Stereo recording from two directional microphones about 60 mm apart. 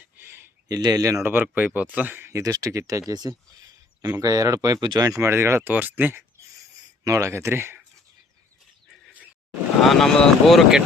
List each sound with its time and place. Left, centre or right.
0.2 s a sound: right
0.7 s speech: right
1.2 s speech: right
2.4 s speech: right
3.1 s speech: right
5.2 s speech: right
5.6 s speech: right
7.0 s speech: right
7.3 s speech: right
9.8 s speech: centre